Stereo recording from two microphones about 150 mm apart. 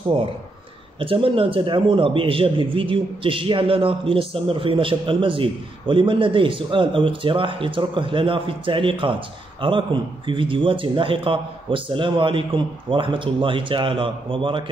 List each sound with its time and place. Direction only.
0.9 s a man's voice: 35° right (ahead or behind)